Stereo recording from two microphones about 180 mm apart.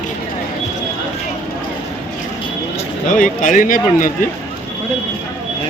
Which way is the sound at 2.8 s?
45° left (ahead or behind).